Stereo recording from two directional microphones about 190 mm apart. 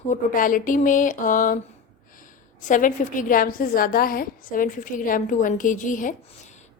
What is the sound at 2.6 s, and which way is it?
A woman's voice, 45° left (ahead or behind).